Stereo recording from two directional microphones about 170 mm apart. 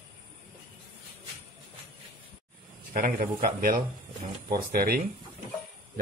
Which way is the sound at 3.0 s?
55° right (ahead or behind).